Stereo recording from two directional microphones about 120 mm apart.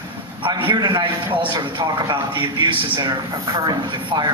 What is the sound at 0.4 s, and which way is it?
Speech, 40° right (ahead or behind).